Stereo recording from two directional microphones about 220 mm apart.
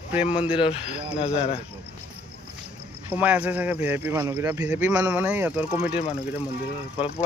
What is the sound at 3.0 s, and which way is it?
Speech, 5° right (ahead or behind).